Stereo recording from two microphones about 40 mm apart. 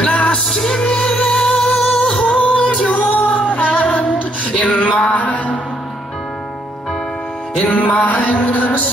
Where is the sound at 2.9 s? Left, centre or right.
Left.